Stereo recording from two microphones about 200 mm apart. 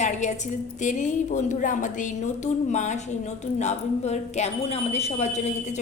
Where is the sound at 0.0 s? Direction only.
35° left (ahead or behind).